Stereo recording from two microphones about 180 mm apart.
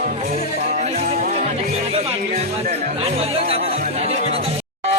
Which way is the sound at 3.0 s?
35° right (ahead or behind).